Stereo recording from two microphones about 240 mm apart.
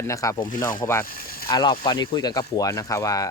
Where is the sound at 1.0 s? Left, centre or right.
Left.